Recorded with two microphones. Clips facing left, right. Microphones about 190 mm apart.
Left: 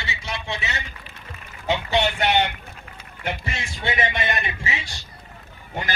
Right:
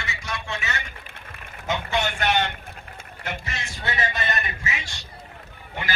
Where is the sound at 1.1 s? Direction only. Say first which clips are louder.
Left 1 dB; 55° right (ahead or behind).